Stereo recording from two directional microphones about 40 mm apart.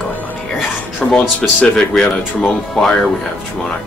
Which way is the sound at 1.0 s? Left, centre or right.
Centre.